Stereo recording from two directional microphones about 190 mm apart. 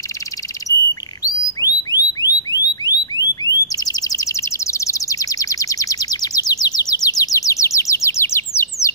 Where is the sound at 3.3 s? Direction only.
20° left (ahead or behind).